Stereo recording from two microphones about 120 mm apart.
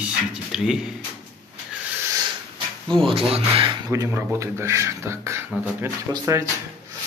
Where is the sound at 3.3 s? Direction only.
55° right (ahead or behind).